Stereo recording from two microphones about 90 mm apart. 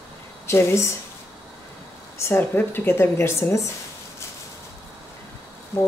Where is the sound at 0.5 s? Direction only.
30° left (ahead or behind).